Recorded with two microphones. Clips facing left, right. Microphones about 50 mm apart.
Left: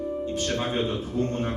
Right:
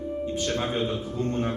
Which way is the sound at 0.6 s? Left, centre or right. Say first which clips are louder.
Left 1 dB; left.